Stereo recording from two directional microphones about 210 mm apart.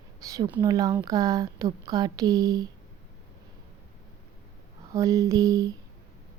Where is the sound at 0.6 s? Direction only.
15° right (ahead or behind).